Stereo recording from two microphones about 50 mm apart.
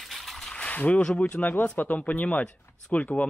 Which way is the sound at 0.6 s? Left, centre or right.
Left.